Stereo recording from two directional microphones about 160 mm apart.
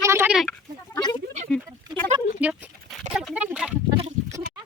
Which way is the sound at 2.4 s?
10° right (ahead or behind).